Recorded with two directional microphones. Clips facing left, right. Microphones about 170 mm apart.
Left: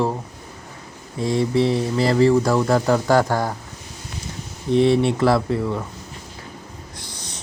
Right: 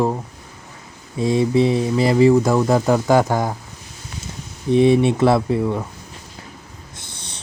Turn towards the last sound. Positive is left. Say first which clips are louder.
# right 2 dB
turn(degrees=-15)  # may be behind; listen again after turning